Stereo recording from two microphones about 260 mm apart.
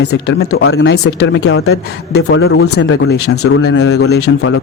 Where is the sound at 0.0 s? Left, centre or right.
Left.